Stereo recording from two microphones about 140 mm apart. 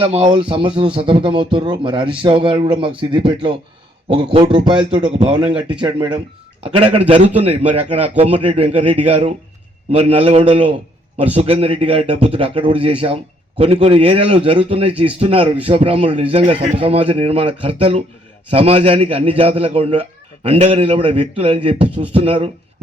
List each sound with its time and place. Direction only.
0.0 s speech: 45° right (ahead or behind)